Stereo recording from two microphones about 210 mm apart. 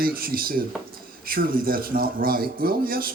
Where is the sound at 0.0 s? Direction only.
45° right (ahead or behind).